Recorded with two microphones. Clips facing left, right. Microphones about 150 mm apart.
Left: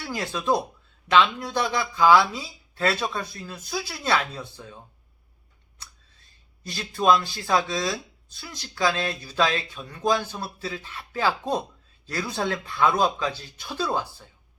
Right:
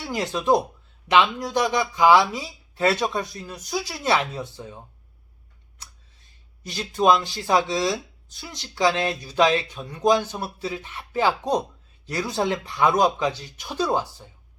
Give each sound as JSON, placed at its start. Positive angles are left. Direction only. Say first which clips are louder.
{"t": 0.0, "sound": "speech", "louder": "right 3 dB", "side_deg": -20}
{"t": 6.6, "sound": "speech", "louder": "right 5 dB", "side_deg": -15}